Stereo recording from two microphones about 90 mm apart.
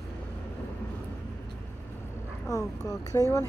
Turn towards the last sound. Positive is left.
turn(degrees=35)  # may be behind; listen again after turning